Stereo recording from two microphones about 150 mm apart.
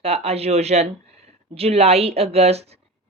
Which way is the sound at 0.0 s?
40° right (ahead or behind).